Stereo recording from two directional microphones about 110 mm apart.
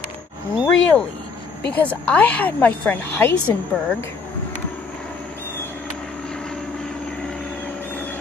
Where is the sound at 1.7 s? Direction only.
15° left (ahead or behind).